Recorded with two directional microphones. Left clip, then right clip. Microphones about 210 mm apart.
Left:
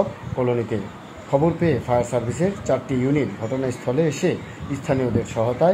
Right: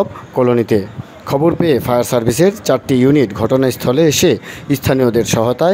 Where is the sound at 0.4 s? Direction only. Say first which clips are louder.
Right 10 dB; 45° right (ahead or behind).